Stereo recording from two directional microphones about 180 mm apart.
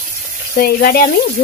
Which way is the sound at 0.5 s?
55° left (ahead or behind).